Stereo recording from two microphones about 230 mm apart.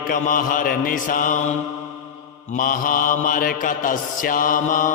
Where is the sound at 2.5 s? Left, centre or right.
Left.